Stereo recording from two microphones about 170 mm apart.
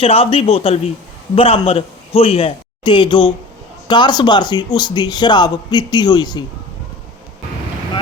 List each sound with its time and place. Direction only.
0.0 s a man's voice: 35° left (ahead or behind)